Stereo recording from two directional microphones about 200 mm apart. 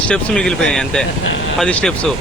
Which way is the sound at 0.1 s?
5° left (ahead or behind).